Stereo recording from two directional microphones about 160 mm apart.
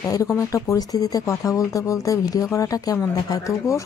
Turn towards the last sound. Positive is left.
turn(degrees=20)  # may be behind; listen again after turning